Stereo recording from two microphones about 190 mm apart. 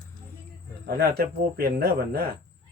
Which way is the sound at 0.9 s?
55° right (ahead or behind).